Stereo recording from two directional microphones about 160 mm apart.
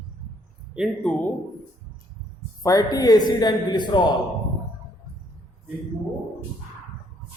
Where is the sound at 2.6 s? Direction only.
25° left (ahead or behind).